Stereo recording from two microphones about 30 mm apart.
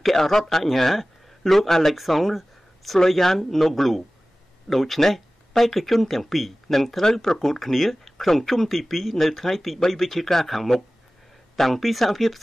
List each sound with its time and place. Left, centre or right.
0.0 s speech: centre
7.0 s speech: centre